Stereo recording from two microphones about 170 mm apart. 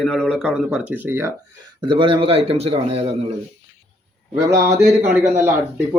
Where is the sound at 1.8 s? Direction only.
30° right (ahead or behind).